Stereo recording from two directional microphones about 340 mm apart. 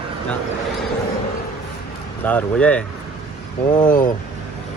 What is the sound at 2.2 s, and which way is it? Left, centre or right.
Speech, centre.